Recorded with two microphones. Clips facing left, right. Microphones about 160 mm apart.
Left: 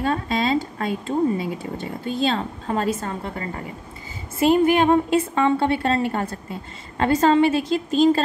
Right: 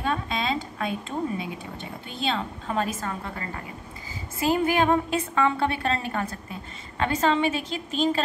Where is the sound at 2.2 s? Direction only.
40° left (ahead or behind).